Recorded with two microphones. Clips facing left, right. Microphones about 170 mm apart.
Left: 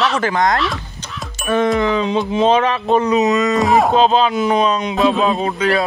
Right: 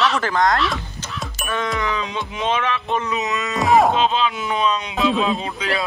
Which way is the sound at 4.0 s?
40° left (ahead or behind).